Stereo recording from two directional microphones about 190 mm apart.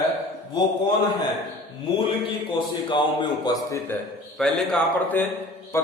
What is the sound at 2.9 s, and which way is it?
Speech, 25° left (ahead or behind).